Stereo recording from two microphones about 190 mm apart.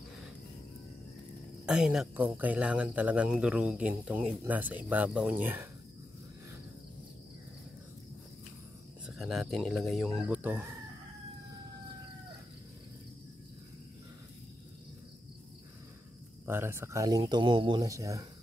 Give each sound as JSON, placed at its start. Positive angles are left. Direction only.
{"t": 1.7, "sound": "speech", "side_deg": -5}
{"t": 9.0, "sound": "speech", "side_deg": 0}
{"t": 16.4, "sound": "speech", "side_deg": -10}